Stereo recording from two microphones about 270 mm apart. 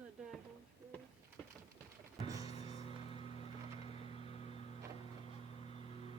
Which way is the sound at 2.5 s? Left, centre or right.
Left.